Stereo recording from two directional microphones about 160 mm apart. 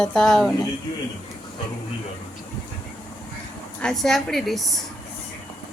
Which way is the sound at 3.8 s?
5° left (ahead or behind).